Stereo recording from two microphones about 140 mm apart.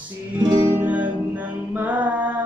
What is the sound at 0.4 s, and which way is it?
Music, 30° right (ahead or behind).